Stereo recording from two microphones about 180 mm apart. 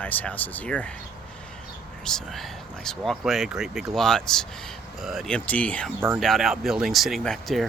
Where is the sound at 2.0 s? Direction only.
Centre (ahead or behind).